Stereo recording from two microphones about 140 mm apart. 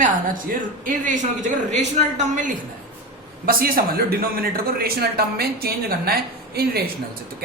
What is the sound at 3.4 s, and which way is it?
A man's voice, 90° right.